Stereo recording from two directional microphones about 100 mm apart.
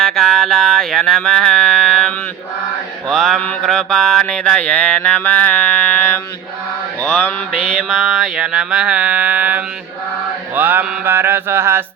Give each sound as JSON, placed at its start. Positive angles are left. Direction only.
{"t": 0.0, "sound": "music", "side_deg": 5}
{"t": 3.1, "sound": "mantra", "side_deg": 5}
{"t": 7.8, "sound": "a sound", "side_deg": 5}
{"t": 10.5, "sound": "mantra", "side_deg": -20}